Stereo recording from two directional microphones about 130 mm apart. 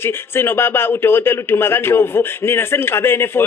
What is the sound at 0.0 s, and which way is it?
A man's voice, 20° left (ahead or behind).